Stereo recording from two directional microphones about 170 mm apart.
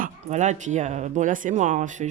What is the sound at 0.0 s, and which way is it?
Speech, 45° right (ahead or behind).